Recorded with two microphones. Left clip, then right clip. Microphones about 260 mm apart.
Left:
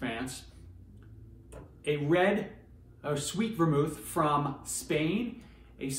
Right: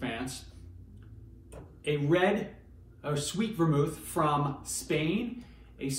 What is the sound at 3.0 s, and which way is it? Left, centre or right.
Speech, centre.